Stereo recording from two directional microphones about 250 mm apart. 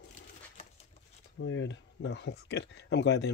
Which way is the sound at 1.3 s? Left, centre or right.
Left.